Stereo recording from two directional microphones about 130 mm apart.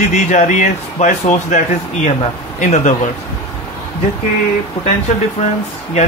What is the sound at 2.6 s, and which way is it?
Speech, 75° left (ahead or behind).